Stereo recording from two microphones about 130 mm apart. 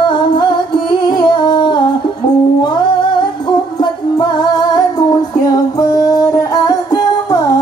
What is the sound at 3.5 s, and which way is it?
Music, 35° left (ahead or behind).